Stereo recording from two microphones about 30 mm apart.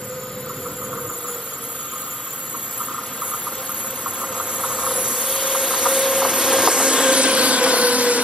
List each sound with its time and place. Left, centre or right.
4.0 s vehicle: right